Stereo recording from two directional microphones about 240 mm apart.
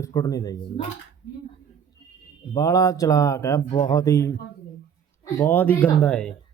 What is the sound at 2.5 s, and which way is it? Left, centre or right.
Speech, centre.